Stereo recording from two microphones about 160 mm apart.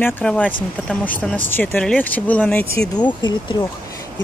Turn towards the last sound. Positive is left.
turn(degrees=30)  # may be behind; listen again after turning